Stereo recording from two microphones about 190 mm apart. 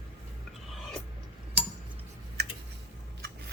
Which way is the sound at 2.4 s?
60° right (ahead or behind).